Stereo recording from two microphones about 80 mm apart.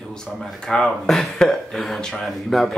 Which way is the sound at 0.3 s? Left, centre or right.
Centre.